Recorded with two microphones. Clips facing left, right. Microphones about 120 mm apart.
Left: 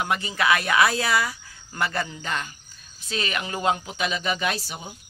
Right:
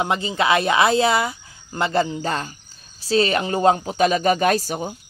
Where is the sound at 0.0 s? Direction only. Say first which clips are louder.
Right 4 dB; 25° right (ahead or behind).